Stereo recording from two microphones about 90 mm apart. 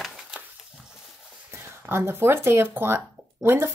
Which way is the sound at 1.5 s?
25° right (ahead or behind).